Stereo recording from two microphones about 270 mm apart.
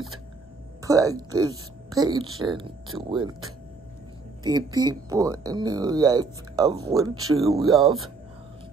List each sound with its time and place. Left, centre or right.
0.8 s speech: centre
4.4 s speech: centre